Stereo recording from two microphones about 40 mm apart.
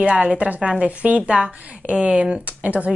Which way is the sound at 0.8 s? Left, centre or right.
Right.